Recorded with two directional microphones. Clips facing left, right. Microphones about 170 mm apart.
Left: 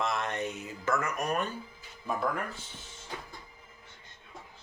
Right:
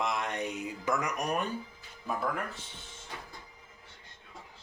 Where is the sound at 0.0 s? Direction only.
15° right (ahead or behind).